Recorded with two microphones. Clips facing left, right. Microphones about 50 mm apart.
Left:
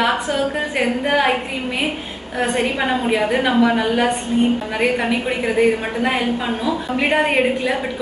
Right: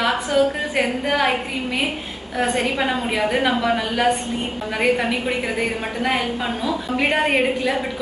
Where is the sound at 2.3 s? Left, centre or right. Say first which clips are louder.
Left 1 dB; centre.